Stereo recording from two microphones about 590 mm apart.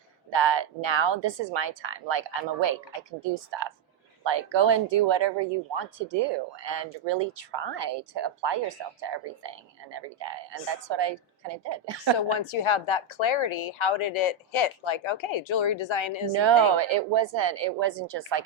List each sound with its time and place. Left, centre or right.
0.3 s speech: right
12.6 s speech: left
16.3 s speech: right